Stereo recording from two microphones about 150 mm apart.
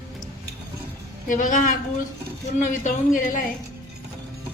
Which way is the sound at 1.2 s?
60° left (ahead or behind).